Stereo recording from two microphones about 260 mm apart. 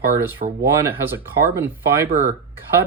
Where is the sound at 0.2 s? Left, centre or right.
Centre.